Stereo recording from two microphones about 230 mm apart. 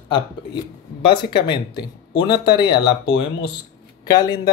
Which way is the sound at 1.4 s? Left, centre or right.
Centre.